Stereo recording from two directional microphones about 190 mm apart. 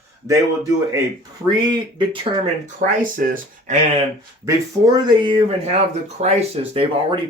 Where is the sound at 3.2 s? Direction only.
45° right (ahead or behind).